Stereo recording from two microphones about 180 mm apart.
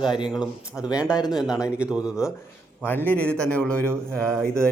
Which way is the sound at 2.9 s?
10° left (ahead or behind).